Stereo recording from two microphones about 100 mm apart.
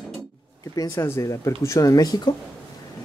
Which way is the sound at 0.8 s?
35° left (ahead or behind).